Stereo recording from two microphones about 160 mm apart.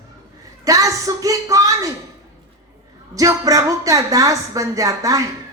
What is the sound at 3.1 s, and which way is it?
Speech, 20° right (ahead or behind).